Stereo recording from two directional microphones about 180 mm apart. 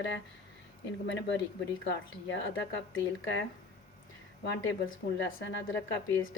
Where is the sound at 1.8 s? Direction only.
85° left.